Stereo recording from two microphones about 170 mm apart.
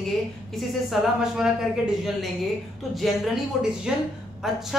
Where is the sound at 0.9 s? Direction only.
5° right (ahead or behind).